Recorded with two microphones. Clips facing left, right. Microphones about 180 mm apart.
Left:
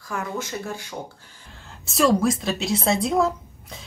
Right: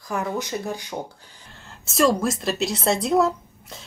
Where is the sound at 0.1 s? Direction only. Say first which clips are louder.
Right 3 dB; 15° right (ahead or behind).